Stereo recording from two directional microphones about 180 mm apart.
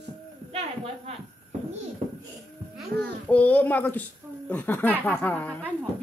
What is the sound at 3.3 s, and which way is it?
Speech, 10° left (ahead or behind).